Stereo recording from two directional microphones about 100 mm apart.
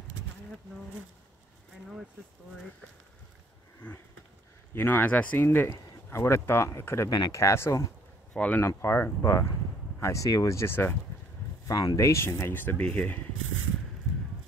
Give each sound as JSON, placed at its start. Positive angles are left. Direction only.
{"t": 3.8, "sound": "a sound", "side_deg": 15}
{"t": 4.7, "sound": "speech", "side_deg": 20}
{"t": 7.1, "sound": "speech", "side_deg": 45}
{"t": 7.3, "sound": "speech", "side_deg": 30}
{"t": 8.3, "sound": "speech", "side_deg": 15}
{"t": 11.6, "sound": "speech", "side_deg": 40}